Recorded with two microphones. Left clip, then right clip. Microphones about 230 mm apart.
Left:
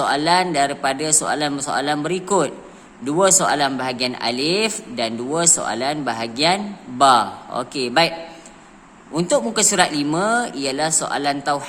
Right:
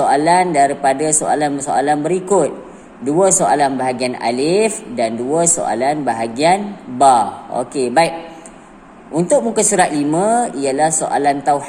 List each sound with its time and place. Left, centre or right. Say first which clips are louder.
0.0 s a man's voice: right 5 dB; left
9.1 s speech: right 5 dB; left